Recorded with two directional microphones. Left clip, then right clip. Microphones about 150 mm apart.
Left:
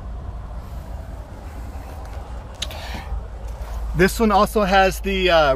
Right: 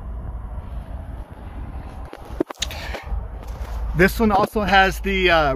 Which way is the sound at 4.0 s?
15° left (ahead or behind).